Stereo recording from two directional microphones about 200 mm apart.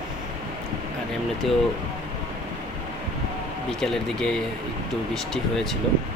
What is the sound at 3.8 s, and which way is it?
Speech, centre (ahead or behind).